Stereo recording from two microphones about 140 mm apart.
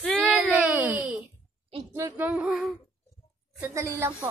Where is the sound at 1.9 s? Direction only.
20° right (ahead or behind).